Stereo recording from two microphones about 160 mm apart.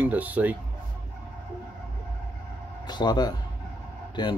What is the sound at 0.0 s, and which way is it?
Speech, 10° right (ahead or behind).